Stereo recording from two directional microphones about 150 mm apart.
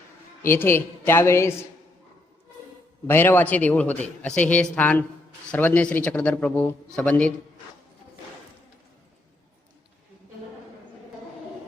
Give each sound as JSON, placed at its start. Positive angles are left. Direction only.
{"t": 0.4, "sound": "a man's voice", "side_deg": 15}
{"t": 3.1, "sound": "a man's voice", "side_deg": 15}